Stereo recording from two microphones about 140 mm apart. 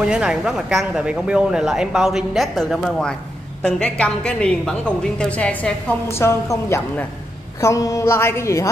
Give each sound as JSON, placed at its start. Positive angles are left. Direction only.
{"t": 0.1, "sound": "a woman's voice", "side_deg": -5}